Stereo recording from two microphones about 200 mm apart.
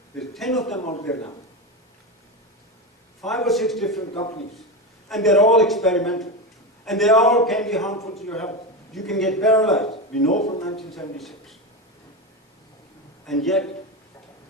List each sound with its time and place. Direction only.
0.2 s a man's voice: centre (ahead or behind)
0.8 s speech: 35° left (ahead or behind)
3.2 s a man's voice: centre (ahead or behind)
4.1 s a man's voice: 30° left (ahead or behind)
5.0 s a man's voice: centre (ahead or behind)
10.2 s speech: 35° left (ahead or behind)
10.8 s a man's voice: centre (ahead or behind)
13.2 s a man's voice: centre (ahead or behind)